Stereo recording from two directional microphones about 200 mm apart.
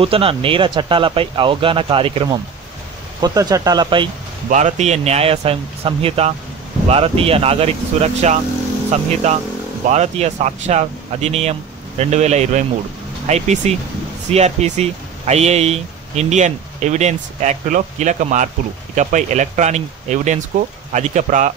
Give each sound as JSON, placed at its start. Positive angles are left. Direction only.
{"t": 0.0, "sound": "speech", "side_deg": -30}
{"t": 4.5, "sound": "speech", "side_deg": -35}